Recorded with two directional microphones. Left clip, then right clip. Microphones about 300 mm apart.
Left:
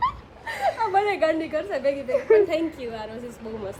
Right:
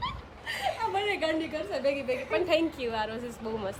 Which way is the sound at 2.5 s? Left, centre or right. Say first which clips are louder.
Even; centre.